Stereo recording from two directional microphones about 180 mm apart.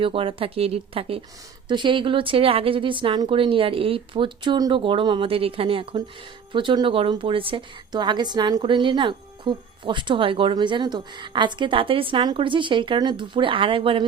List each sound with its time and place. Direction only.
0.0 s a woman's voice: 30° right (ahead or behind)